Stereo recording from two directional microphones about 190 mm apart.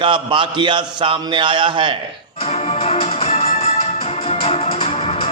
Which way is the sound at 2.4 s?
35° left (ahead or behind).